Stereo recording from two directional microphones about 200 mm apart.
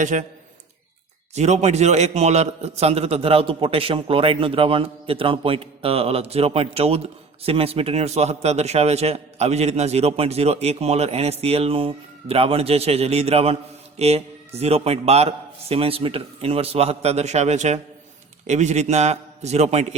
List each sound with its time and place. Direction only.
0.0 s a man's voice: 40° right (ahead or behind)
1.4 s a man's voice: 35° right (ahead or behind)